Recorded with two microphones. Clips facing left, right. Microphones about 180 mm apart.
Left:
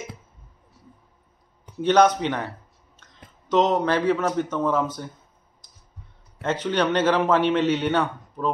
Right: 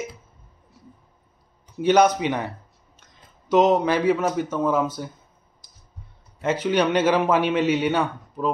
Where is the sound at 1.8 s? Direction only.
10° right (ahead or behind).